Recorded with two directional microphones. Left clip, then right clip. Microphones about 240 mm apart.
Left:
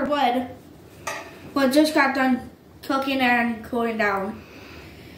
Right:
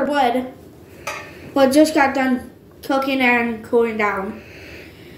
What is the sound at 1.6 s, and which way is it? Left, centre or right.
A woman's voice, centre.